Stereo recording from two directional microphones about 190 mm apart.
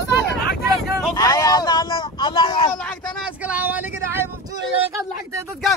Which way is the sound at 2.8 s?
5° left (ahead or behind).